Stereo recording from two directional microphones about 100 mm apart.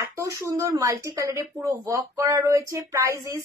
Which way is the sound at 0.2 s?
30° right (ahead or behind).